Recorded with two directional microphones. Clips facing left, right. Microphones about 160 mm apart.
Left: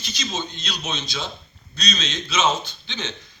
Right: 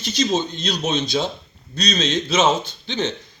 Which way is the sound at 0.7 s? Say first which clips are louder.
Right 10 dB; 50° right (ahead or behind).